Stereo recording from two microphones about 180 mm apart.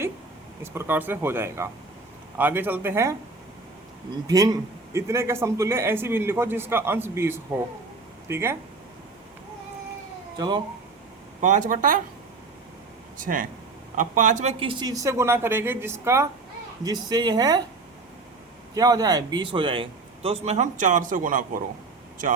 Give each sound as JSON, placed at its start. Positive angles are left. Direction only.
{"t": 0.6, "sound": "a man's voice", "side_deg": -15}
{"t": 4.3, "sound": "a man's voice", "side_deg": -20}
{"t": 10.3, "sound": "speech", "side_deg": -25}
{"t": 11.3, "sound": "speech", "side_deg": -45}
{"t": 13.1, "sound": "speech", "side_deg": -50}
{"t": 14.6, "sound": "a man's voice", "side_deg": -25}
{"t": 18.7, "sound": "a man's voice", "side_deg": -20}